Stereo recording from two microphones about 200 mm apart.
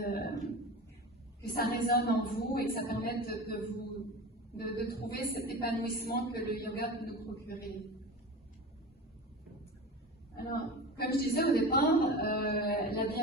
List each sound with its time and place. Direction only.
0.0 s a sound: 50° left (ahead or behind)
1.4 s a woman's voice: 50° left (ahead or behind)
10.3 s a woman's voice: 50° left (ahead or behind)